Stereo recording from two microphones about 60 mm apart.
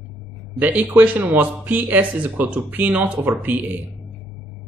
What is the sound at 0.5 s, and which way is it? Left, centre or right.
Speech, right.